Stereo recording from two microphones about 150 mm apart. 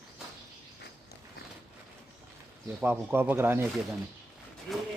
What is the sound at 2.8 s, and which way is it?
Speech, 15° right (ahead or behind).